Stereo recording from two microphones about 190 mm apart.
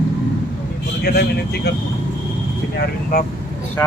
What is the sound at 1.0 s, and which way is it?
Speech, 55° left (ahead or behind).